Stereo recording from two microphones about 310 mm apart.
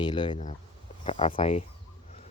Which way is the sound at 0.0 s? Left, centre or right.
Centre.